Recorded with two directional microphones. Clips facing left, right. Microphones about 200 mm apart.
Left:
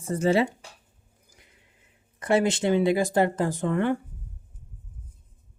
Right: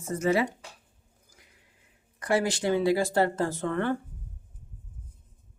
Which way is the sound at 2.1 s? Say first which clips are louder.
Left 4 dB; 25° left (ahead or behind).